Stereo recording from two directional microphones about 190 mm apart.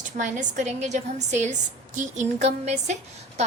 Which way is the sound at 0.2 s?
40° right (ahead or behind).